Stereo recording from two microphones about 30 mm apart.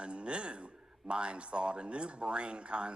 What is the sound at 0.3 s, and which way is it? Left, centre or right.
Speech, right.